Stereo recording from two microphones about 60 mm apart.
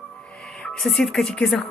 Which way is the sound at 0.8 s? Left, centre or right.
Centre.